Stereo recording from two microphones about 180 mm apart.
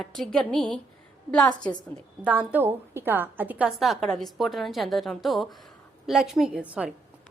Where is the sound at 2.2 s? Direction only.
10° right (ahead or behind).